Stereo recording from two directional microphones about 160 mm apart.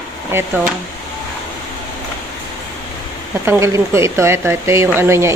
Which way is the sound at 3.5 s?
15° right (ahead or behind).